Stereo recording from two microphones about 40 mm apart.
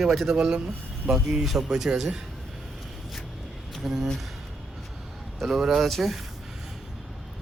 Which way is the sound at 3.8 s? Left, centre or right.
Centre.